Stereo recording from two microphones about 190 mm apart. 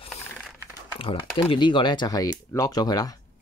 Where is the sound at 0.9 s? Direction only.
25° left (ahead or behind).